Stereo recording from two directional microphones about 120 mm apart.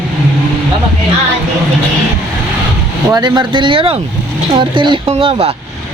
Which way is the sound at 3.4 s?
45° right (ahead or behind).